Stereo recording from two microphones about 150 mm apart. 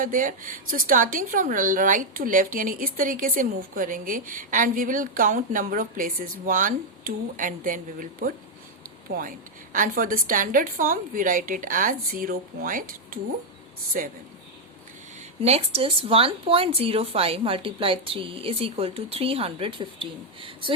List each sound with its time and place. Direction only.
0.0 s speech: 60° right (ahead or behind)
9.1 s speech: 90° right
9.7 s a man's voice: 65° right (ahead or behind)
15.4 s a woman's voice: 45° right (ahead or behind)